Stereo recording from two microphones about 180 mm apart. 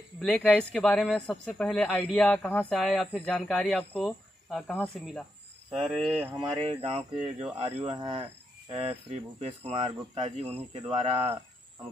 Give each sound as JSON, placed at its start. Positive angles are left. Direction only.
{"t": 0.2, "sound": "speech", "side_deg": 5}
{"t": 6.6, "sound": "speech", "side_deg": -30}